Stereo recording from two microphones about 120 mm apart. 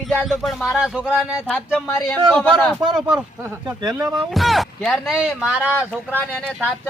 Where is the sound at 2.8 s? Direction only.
30° right (ahead or behind).